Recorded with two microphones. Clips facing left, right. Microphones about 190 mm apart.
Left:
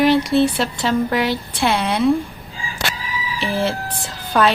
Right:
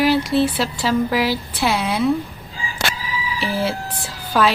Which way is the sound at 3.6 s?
5° right (ahead or behind).